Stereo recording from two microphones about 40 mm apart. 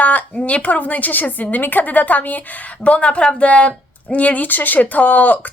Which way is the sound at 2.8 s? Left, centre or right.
Left.